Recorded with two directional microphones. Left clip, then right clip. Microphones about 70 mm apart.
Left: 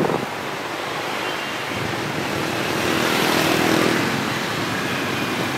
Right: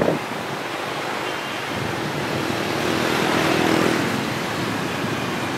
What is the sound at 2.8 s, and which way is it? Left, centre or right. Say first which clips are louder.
Vehicle: left 2 dB; left.